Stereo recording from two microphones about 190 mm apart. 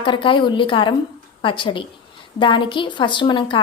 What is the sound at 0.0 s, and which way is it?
A woman's voice, 25° left (ahead or behind).